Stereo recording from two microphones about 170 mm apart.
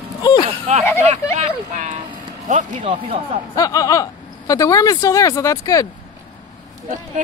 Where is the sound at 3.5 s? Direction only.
20° left (ahead or behind).